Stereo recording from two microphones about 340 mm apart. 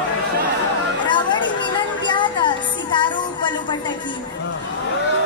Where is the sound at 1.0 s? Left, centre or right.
Centre.